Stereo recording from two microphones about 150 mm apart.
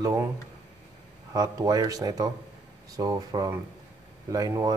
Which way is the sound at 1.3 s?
25° right (ahead or behind).